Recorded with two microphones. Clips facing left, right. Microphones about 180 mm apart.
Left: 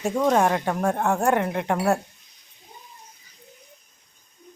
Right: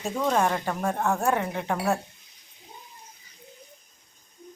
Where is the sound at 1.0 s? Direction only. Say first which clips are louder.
Left 2 dB; 15° left (ahead or behind).